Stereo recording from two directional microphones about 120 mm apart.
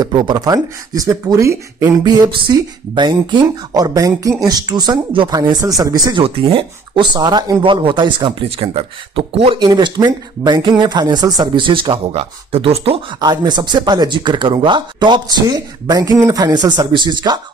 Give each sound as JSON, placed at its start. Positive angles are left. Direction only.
{"t": 0.0, "sound": "speech", "side_deg": -35}
{"t": 2.0, "sound": "speech", "side_deg": -35}
{"t": 6.1, "sound": "speech", "side_deg": -45}
{"t": 7.2, "sound": "speech", "side_deg": -35}
{"t": 13.2, "sound": "speech", "side_deg": -35}